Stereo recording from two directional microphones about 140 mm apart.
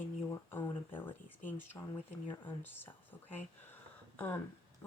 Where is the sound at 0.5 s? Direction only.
15° left (ahead or behind).